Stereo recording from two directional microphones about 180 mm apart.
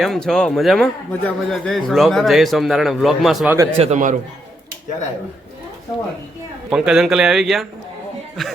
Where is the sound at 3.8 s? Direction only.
40° right (ahead or behind).